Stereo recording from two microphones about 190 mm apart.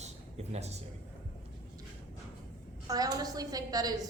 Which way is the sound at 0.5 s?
35° right (ahead or behind).